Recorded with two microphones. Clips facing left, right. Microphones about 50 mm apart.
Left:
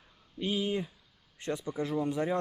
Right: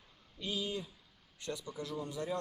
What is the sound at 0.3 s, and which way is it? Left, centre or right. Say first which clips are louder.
Speech: left 7 dB; left.